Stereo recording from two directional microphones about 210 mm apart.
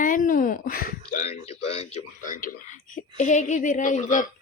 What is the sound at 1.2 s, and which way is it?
Speech, 30° left (ahead or behind).